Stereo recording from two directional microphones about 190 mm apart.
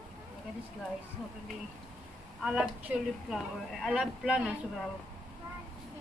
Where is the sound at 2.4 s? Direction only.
5° right (ahead or behind).